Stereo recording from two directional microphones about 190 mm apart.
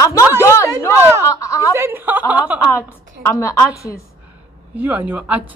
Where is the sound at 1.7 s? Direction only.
15° right (ahead or behind).